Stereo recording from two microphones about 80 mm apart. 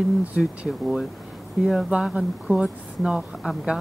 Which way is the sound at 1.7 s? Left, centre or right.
Centre.